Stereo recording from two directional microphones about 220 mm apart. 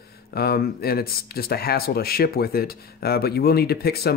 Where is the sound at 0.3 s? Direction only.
45° left (ahead or behind).